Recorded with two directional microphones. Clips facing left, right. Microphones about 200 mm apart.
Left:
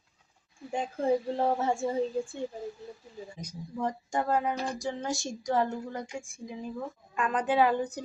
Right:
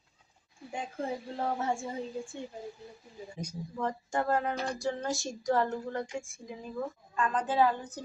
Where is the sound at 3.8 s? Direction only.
15° left (ahead or behind).